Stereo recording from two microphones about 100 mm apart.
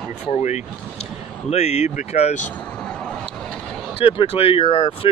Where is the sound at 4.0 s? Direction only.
65° left (ahead or behind).